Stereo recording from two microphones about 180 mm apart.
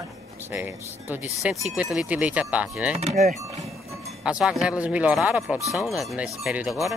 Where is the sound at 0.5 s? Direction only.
10° right (ahead or behind).